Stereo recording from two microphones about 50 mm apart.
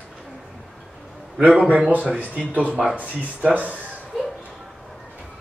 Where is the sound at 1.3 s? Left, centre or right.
Right.